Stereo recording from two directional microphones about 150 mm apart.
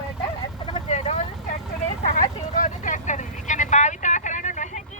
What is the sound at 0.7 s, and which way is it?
Vehicle, 45° left (ahead or behind).